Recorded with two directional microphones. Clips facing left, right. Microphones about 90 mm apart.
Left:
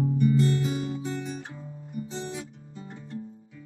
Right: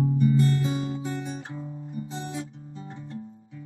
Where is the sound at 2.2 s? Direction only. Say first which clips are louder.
Right 2 dB; 30° right (ahead or behind).